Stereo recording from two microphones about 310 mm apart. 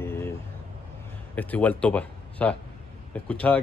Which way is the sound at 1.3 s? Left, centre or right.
Centre.